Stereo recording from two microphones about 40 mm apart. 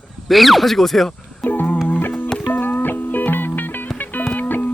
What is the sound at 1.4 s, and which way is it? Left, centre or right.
Music, left.